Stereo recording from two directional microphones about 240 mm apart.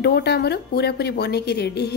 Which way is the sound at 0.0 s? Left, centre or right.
Left.